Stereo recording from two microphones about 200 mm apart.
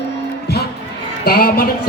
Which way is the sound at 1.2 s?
50° left (ahead or behind).